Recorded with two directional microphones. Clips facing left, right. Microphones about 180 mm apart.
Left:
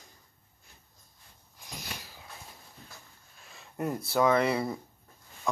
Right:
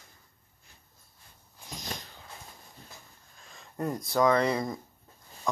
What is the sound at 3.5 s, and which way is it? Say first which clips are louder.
Speech: even; 10° left (ahead or behind).